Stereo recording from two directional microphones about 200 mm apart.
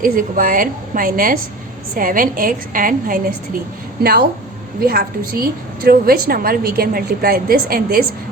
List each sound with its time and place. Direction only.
0.0 s a woman's voice: 45° right (ahead or behind)